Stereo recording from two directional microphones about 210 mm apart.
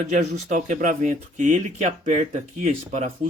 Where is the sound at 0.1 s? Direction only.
35° right (ahead or behind).